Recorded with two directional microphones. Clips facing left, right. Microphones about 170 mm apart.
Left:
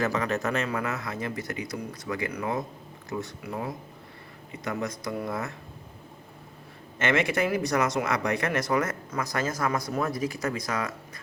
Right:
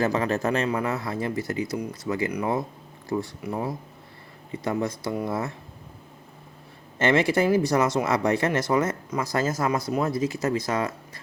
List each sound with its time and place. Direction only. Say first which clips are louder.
0.0 s speech: right 3 dB; 30° right (ahead or behind)
3.1 s speech: right 6 dB; 35° right (ahead or behind)
4.5 s speech: right 5 dB; 30° right (ahead or behind)
7.0 s speech: right 4 dB; 30° right (ahead or behind)